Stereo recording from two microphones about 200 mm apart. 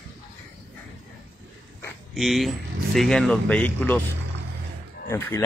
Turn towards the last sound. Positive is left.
turn(degrees=15)  # may be behind; listen again after turning